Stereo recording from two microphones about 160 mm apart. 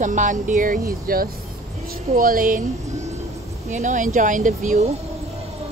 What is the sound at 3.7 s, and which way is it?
Speech, 50° right (ahead or behind).